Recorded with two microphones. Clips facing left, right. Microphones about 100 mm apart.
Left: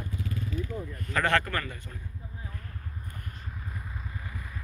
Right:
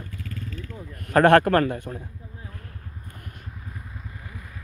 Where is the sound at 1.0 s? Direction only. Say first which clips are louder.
Right 11 dB; 60° right (ahead or behind).